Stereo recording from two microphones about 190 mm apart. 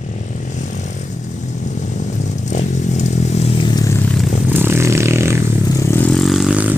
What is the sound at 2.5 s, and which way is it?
Vehicle, 40° left (ahead or behind).